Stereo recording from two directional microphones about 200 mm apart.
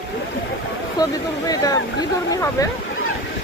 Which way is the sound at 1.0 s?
20° left (ahead or behind).